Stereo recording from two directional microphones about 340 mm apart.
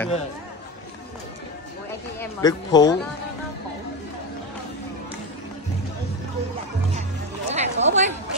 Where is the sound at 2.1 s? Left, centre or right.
Centre.